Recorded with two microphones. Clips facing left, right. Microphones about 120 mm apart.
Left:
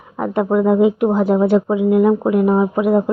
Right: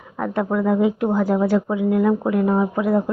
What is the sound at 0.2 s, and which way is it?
Speech, 20° left (ahead or behind).